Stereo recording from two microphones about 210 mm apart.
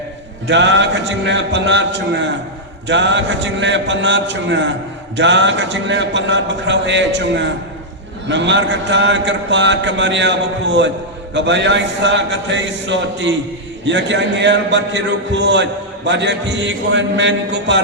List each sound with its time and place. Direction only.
0.4 s speech: 55° right (ahead or behind)